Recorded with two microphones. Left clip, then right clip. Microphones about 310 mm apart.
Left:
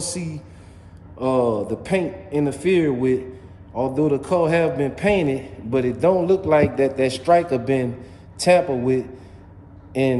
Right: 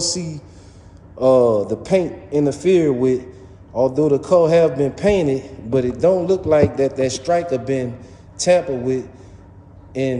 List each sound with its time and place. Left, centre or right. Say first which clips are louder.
0.0 s a man's voice: right 6 dB; centre